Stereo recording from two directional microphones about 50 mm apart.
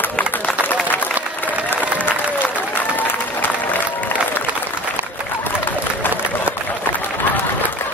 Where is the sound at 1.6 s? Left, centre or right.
Left.